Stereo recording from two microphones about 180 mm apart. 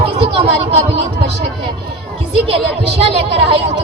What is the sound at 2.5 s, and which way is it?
Speech, 35° right (ahead or behind).